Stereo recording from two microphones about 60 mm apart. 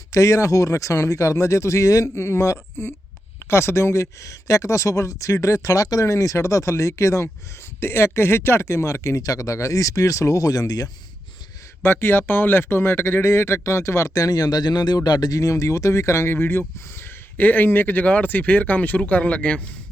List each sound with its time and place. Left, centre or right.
0.1 s speech: left
7.8 s speech: left
11.8 s a man's voice: left; by 19.6 s centre